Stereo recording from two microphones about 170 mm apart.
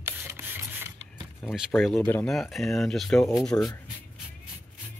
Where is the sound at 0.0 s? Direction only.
15° right (ahead or behind).